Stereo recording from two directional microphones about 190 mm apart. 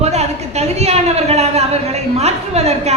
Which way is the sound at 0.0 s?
35° right (ahead or behind).